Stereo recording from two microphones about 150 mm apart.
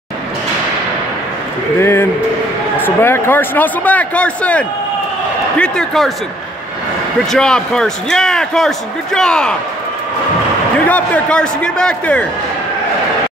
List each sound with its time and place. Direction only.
1.8 s a man's voice: 15° left (ahead or behind)
7.3 s a man's voice: 5° left (ahead or behind)
10.9 s a man's voice: 10° left (ahead or behind)